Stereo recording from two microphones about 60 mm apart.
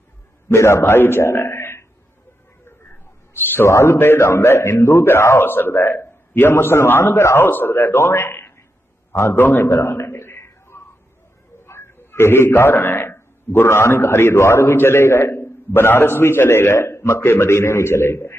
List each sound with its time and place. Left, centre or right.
0.4 s a man's voice: left
3.3 s a man's voice: left
3.7 s a man's voice: left
9.4 s a man's voice: left
9.6 s a sound: left
11.6 s a man's voice: left